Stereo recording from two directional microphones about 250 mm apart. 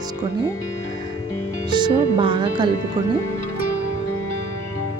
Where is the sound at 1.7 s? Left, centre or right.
Centre.